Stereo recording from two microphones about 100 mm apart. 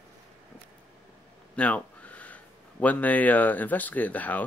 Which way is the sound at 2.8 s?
15° left (ahead or behind).